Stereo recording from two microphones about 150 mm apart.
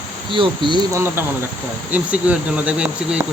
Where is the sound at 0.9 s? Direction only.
15° right (ahead or behind).